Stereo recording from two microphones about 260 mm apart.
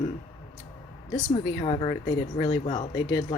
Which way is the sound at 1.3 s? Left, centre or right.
Left.